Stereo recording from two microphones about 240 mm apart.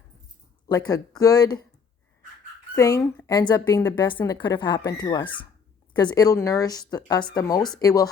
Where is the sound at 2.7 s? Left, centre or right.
Centre.